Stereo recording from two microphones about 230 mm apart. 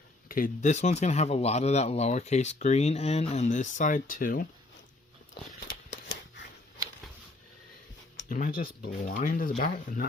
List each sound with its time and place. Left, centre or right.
0.3 s speech: left
5.6 s a sound: left
8.3 s speech: left